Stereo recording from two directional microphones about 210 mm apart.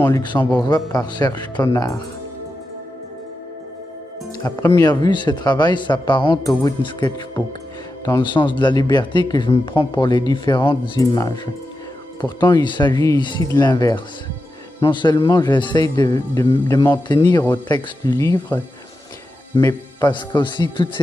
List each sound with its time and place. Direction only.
0.0 s speech: 20° left (ahead or behind)
4.4 s speech: 15° left (ahead or behind)